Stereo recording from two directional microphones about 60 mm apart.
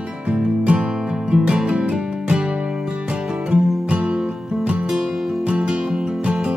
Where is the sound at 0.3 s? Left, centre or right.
Centre.